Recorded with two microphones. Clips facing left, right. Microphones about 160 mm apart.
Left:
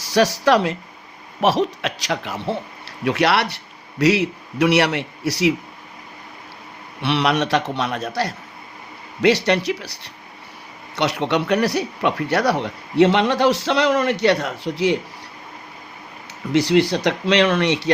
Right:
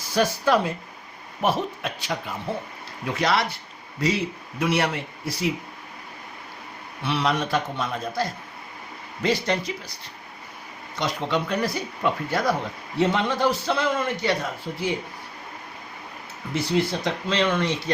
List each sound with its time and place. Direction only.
0.0 s a man's voice: 90° left
7.0 s speech: 75° left (ahead or behind)
16.5 s speech: 90° left